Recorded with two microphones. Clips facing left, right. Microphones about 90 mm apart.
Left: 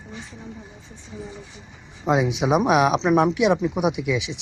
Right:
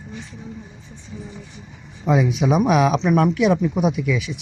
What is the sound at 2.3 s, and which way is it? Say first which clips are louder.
Speech: even; 15° left (ahead or behind).